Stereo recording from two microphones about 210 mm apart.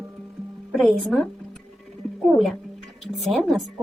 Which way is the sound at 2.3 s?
Centre (ahead or behind).